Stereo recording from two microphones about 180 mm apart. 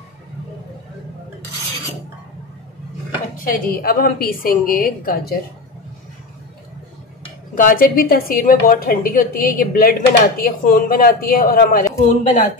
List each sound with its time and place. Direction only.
3.4 s a woman's voice: 55° left (ahead or behind)
7.5 s a woman's voice: 50° left (ahead or behind)
12.1 s speech: 40° left (ahead or behind)